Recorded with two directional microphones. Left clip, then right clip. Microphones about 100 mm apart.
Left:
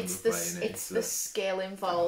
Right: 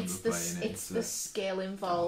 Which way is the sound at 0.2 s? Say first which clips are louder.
Left 4 dB; 20° left (ahead or behind).